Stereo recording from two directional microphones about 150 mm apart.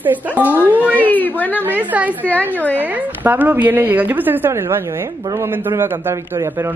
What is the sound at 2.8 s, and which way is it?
A man's voice, 10° right (ahead or behind).